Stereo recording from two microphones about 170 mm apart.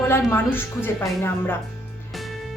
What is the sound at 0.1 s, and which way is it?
Speech, 10° left (ahead or behind).